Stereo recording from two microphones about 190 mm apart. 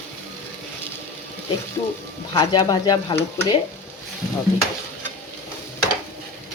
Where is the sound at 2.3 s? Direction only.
20° left (ahead or behind).